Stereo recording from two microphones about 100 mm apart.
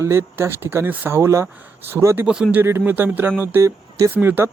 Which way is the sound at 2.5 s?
20° right (ahead or behind).